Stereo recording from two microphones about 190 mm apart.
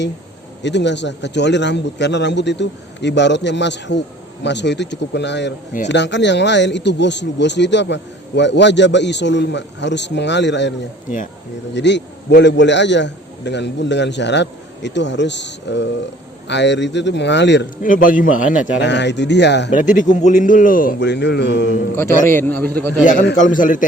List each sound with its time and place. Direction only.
0.6 s a man's voice: 65° left (ahead or behind)
17.8 s speech: 45° left (ahead or behind)
18.8 s speech: 65° left (ahead or behind)
19.7 s speech: 40° left (ahead or behind)
21.0 s a man's voice: 65° left (ahead or behind)
22.3 s a man's voice: 10° left (ahead or behind)
23.3 s speech: 45° left (ahead or behind)